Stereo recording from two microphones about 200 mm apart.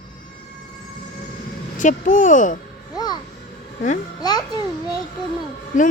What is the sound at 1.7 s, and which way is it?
Speech, 40° left (ahead or behind).